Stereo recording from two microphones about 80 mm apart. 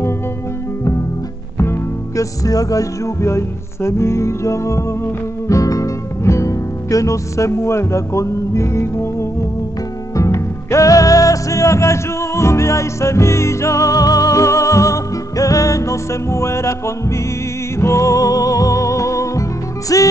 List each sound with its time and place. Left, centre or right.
1.6 s music: left
2.4 s music: left